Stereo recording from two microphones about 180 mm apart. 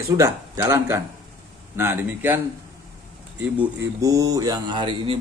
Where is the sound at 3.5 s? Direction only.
15° right (ahead or behind).